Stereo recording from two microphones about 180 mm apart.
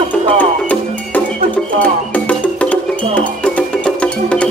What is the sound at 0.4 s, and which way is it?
Music, 10° left (ahead or behind).